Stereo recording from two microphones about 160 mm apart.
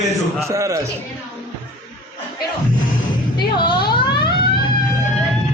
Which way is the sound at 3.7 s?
30° left (ahead or behind).